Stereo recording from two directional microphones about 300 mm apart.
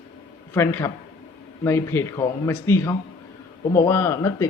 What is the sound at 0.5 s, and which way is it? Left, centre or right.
Speech, centre.